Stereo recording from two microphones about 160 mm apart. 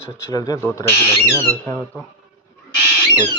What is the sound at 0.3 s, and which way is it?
Speech, 25° left (ahead or behind).